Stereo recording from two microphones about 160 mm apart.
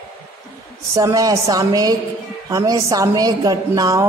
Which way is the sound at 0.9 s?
20° right (ahead or behind).